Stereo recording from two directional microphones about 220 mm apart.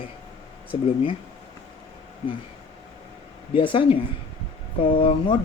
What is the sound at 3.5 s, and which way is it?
Speech, 25° left (ahead or behind).